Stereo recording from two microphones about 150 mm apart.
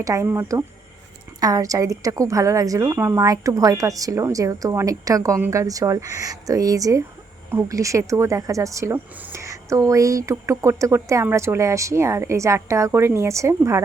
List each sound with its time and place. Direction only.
0.0 s speech: 20° right (ahead or behind)